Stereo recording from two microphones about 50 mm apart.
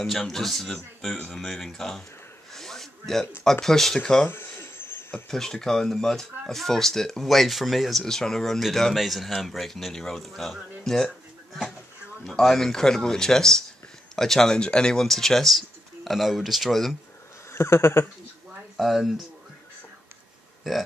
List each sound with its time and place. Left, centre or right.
0.0 s speech: centre
2.5 s a sound: centre
3.6 s speech: centre
4.3 s a sound: left
5.3 s speech: centre
8.0 s speech: centre
12.3 s speech: centre
17.5 s speech: left
18.8 s speech: centre
20.7 s speech: centre